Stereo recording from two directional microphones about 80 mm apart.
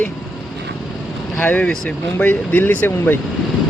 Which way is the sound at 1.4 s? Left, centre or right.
Centre.